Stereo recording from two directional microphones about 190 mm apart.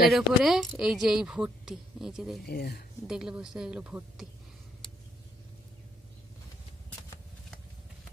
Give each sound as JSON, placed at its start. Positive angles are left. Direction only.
{"t": 0.1, "sound": "speech", "side_deg": 0}
{"t": 2.4, "sound": "speech", "side_deg": 55}
{"t": 3.1, "sound": "speech", "side_deg": -5}